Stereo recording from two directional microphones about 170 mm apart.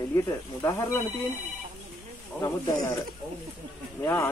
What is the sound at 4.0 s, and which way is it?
Speech, 15° left (ahead or behind).